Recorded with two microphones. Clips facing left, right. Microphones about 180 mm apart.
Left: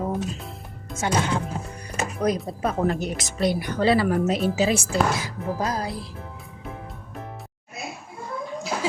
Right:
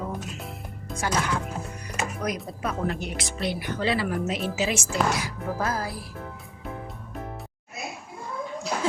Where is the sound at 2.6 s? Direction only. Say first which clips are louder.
Left 5 dB; 40° left (ahead or behind); by 6.0 s 20° left (ahead or behind).